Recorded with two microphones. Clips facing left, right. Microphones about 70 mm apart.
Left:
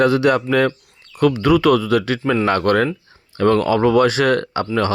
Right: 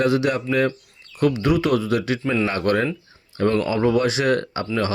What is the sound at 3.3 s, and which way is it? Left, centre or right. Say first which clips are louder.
Speech: left 5 dB; left.